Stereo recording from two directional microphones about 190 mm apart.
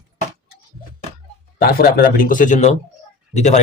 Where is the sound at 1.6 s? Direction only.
50° left (ahead or behind).